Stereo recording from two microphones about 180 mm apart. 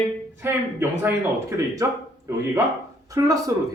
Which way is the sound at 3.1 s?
20° right (ahead or behind).